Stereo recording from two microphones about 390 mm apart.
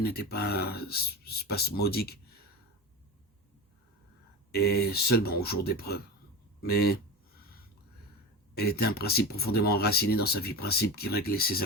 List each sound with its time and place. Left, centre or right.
0.0 s speech: left
4.5 s speech: left
8.5 s speech: left